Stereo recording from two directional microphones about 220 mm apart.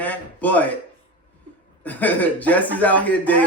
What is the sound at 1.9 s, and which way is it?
A man's voice, 5° left (ahead or behind).